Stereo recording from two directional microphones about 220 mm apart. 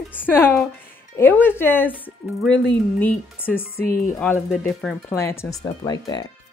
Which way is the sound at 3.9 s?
40° left (ahead or behind).